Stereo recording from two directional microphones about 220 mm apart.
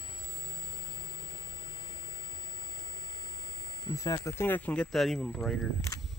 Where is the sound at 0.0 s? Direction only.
20° left (ahead or behind); by 5.7 s 5° left (ahead or behind).